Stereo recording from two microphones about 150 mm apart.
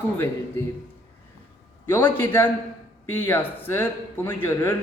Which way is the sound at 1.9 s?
15° left (ahead or behind).